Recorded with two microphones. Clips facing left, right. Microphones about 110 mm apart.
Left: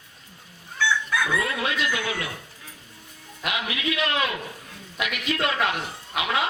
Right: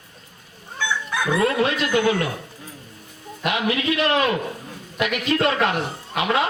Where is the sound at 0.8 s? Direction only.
20° right (ahead or behind).